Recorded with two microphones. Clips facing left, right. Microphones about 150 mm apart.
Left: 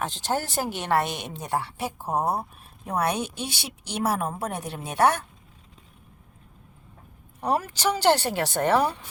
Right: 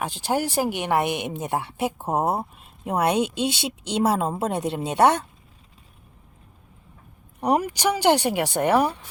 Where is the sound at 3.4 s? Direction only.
20° right (ahead or behind).